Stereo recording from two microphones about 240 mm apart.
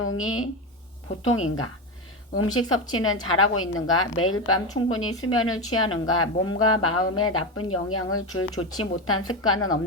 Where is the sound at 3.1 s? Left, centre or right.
Left.